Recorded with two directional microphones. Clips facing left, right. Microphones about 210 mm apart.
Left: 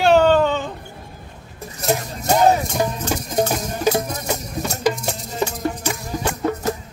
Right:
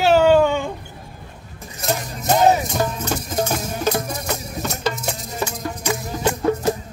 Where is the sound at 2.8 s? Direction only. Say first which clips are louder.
Left 1 dB; 15° left (ahead or behind).